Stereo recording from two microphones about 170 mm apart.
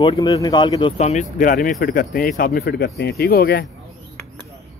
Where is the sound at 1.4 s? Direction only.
55° left (ahead or behind).